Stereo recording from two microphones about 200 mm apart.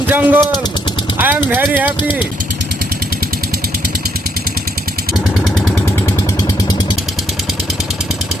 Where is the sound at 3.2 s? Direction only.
50° right (ahead or behind).